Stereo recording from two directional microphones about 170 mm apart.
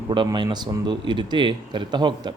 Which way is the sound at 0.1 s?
25° right (ahead or behind).